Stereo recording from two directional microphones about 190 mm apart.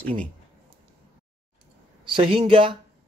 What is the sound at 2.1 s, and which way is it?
Speech, 25° right (ahead or behind).